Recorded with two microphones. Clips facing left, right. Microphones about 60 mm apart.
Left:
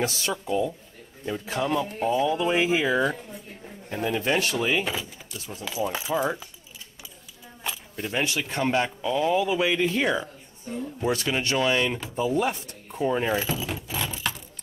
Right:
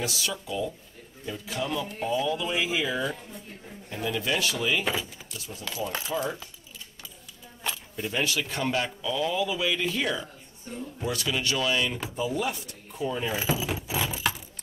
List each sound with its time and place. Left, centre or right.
0.0 s speech: left
4.8 s speech: centre
5.7 s speech: centre
7.7 s a sound: centre
8.0 s speech: left
13.4 s vehicle: centre